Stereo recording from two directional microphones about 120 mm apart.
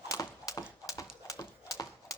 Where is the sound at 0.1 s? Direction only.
30° left (ahead or behind).